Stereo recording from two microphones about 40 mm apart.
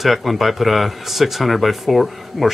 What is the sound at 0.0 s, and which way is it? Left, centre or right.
Speech, centre.